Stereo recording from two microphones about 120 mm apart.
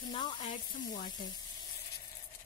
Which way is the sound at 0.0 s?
40° left (ahead or behind).